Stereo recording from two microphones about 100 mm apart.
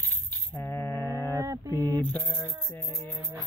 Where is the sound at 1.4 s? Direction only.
35° right (ahead or behind).